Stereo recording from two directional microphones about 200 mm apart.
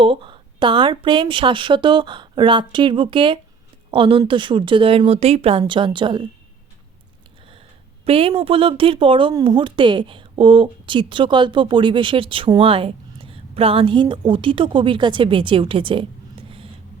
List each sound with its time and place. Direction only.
0.0 s speech: 25° right (ahead or behind)
8.0 s speech: 25° right (ahead or behind)